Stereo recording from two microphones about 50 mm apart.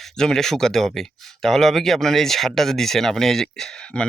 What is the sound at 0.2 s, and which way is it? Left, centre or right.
Speech, centre.